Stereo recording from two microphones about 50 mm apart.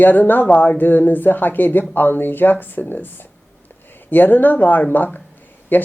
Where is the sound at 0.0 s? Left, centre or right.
Left.